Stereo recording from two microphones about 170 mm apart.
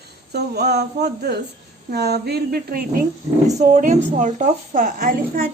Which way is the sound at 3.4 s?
45° right (ahead or behind).